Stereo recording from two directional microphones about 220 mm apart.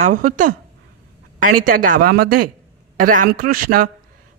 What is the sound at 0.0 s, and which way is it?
A woman's voice, 35° right (ahead or behind).